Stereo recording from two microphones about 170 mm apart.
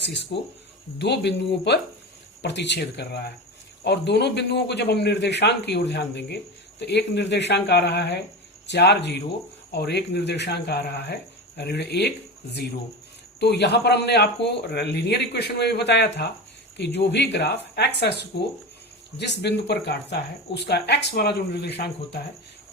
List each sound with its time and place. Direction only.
0.3 s a man's voice: 85° left
9.7 s speech: 75° left (ahead or behind)
13.4 s a man's voice: 80° left